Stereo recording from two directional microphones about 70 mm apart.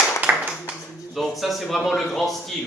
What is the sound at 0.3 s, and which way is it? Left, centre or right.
Clapping, right.